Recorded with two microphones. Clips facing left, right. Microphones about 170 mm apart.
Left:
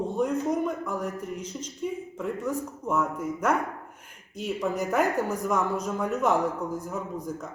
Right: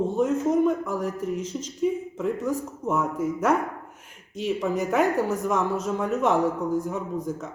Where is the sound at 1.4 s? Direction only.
30° left (ahead or behind).